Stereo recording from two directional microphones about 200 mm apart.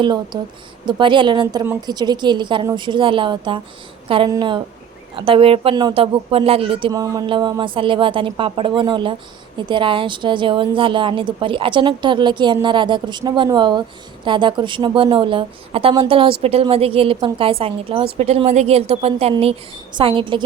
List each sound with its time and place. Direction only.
0.3 s a woman's voice: 20° right (ahead or behind)